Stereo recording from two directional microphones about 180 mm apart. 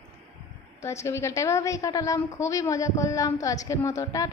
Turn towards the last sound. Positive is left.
turn(degrees=15)  # may be behind; listen again after turning